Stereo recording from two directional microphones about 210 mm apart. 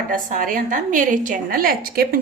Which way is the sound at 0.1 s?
40° right (ahead or behind).